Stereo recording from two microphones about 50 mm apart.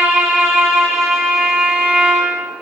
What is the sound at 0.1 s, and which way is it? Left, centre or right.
Music, centre.